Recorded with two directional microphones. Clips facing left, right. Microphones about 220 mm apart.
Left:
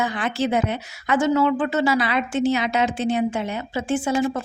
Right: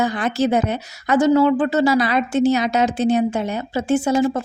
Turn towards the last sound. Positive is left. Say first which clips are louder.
# right 4 dB
turn(degrees=-40)  # may be behind; listen again after turning